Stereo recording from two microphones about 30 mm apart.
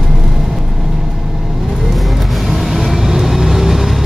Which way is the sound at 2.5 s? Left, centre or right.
Centre.